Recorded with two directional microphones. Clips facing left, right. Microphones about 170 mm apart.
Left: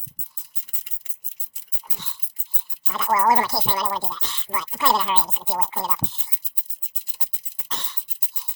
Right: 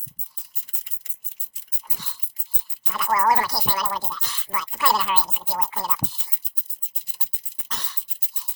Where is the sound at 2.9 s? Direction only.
15° left (ahead or behind).